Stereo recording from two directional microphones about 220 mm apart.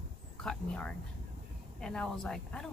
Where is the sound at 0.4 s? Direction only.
5° left (ahead or behind).